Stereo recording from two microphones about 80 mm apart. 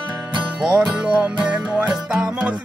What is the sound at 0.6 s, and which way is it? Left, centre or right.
Music, centre.